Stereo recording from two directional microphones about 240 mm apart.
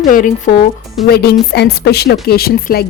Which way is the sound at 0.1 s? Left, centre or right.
Left.